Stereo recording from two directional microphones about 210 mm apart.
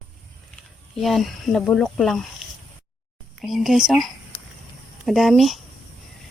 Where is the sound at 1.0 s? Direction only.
Centre (ahead or behind).